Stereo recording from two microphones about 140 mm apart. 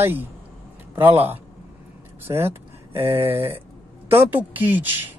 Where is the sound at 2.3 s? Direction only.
25° right (ahead or behind).